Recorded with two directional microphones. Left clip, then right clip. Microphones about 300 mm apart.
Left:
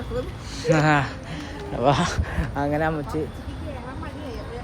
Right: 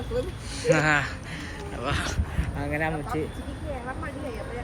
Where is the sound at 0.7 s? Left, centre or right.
Centre.